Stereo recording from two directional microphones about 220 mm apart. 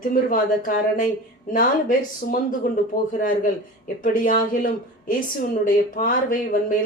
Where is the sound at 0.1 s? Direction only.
40° left (ahead or behind).